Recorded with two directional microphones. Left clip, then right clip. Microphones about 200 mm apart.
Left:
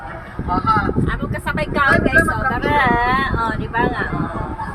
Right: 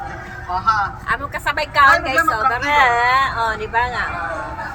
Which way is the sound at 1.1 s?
20° right (ahead or behind).